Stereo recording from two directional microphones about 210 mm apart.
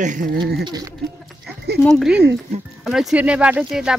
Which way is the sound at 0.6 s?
20° right (ahead or behind).